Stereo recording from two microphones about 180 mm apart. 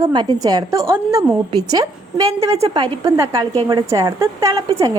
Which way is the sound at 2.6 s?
30° right (ahead or behind).